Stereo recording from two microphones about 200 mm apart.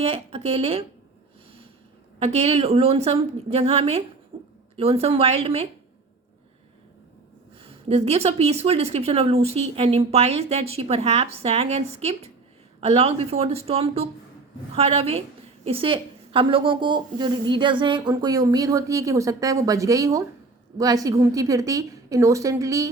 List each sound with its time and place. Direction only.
0.0 s a woman's voice: 30° right (ahead or behind)
2.1 s a woman's voice: 30° right (ahead or behind)
7.6 s a woman's voice: 30° right (ahead or behind)